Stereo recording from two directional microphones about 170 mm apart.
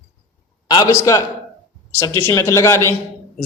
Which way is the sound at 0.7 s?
25° left (ahead or behind).